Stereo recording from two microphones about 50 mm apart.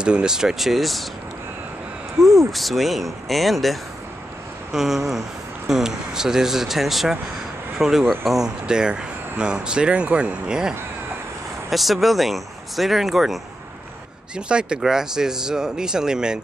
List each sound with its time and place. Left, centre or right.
0.0 s speech: centre
2.5 s speech: centre
4.7 s speech: centre
8.5 s speech: centre
11.7 s speech: centre
14.3 s speech: centre